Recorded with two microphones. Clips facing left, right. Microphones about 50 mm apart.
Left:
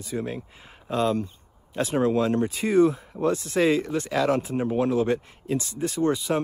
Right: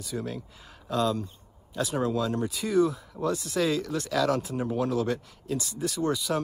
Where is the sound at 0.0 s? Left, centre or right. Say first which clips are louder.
Left 3 dB; left.